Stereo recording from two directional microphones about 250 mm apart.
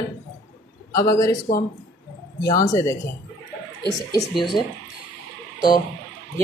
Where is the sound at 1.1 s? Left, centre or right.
Centre.